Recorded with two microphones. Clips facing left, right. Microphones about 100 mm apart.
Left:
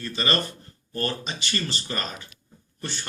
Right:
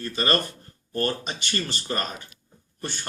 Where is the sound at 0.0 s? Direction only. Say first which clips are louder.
Right 2 dB; 45° right (ahead or behind).